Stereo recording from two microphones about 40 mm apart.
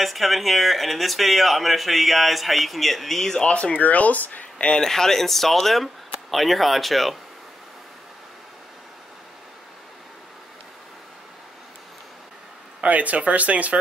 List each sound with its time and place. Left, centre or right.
0.0 s speech: centre
3.4 s speech: left
4.6 s speech: centre
12.8 s speech: right